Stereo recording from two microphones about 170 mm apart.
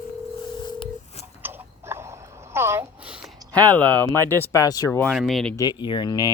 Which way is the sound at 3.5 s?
10° left (ahead or behind).